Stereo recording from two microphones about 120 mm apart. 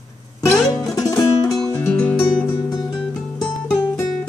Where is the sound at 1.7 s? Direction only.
10° left (ahead or behind).